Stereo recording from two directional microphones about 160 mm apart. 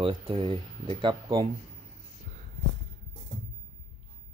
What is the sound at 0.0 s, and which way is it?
Speech, 35° right (ahead or behind).